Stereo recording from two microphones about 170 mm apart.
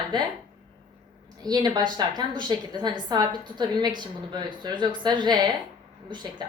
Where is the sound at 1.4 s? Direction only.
25° right (ahead or behind).